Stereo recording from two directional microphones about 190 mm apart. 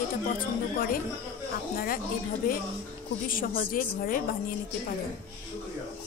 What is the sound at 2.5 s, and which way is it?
A woman's voice, 45° left (ahead or behind).